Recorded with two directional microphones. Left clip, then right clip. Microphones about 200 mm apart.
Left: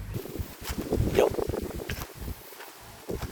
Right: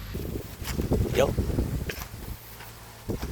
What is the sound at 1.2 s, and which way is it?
Boat, 15° left (ahead or behind).